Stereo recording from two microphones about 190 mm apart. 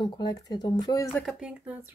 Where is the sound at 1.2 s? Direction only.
Centre (ahead or behind).